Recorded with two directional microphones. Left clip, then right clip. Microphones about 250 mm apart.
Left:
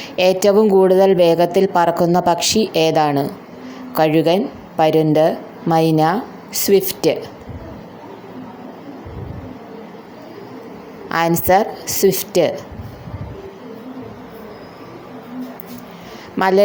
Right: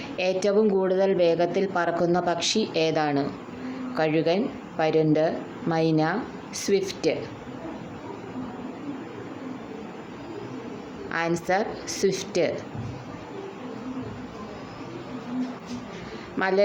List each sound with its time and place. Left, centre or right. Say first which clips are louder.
0.2 s speech: left 10 dB; left
11.1 s speech: left 11 dB; left
16.4 s speech: left 9 dB; left